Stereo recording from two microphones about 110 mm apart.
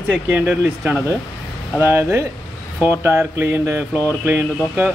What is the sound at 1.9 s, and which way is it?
Mantra, 20° right (ahead or behind).